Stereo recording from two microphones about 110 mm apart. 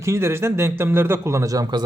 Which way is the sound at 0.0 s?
25° right (ahead or behind).